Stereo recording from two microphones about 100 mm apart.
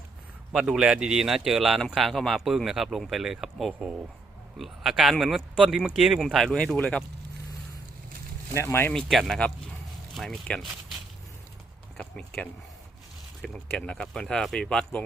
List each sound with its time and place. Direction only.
0.5 s speech: 10° right (ahead or behind); by 7.0 s 10° left (ahead or behind)
8.5 s speech: 25° left (ahead or behind)
8.9 s speech: 5° left (ahead or behind)
11.9 s speech: 10° left (ahead or behind)
13.7 s speech: 10° left (ahead or behind)